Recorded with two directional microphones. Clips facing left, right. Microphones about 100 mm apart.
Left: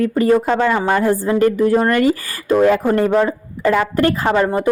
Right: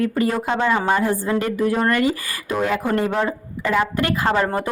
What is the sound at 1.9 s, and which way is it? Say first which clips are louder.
Speech: left 4 dB; 40° left (ahead or behind).